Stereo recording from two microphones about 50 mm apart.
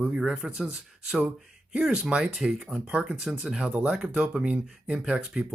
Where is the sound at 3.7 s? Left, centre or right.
Right.